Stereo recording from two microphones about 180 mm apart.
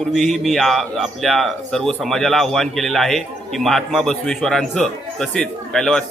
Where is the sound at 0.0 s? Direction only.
Centre (ahead or behind).